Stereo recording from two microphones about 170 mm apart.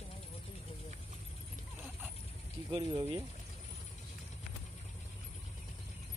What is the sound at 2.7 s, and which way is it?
Speech, 30° right (ahead or behind).